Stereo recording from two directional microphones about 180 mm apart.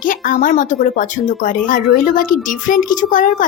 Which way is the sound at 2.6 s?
45° left (ahead or behind).